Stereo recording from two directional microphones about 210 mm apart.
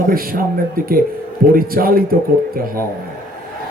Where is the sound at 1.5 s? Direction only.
45° right (ahead or behind).